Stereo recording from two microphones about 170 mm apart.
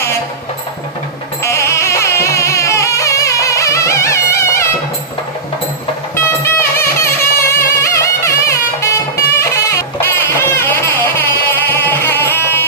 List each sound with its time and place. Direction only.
1.4 s music: 15° left (ahead or behind)
6.1 s music: 15° left (ahead or behind)